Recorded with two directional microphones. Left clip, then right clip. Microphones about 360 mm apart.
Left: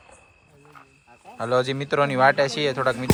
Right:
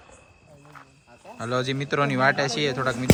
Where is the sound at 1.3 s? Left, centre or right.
Centre.